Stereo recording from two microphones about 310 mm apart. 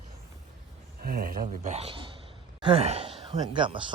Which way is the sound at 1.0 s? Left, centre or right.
Right.